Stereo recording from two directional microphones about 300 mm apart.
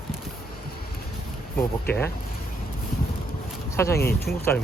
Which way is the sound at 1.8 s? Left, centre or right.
Centre.